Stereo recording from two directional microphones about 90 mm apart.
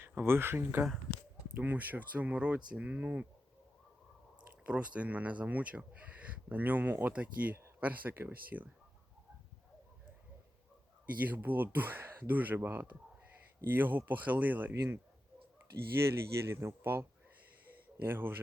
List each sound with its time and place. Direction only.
0.0 s speech: 25° right (ahead or behind)
4.6 s speech: 15° right (ahead or behind)
11.0 s speech: 20° right (ahead or behind)
16.0 s speech: 30° right (ahead or behind)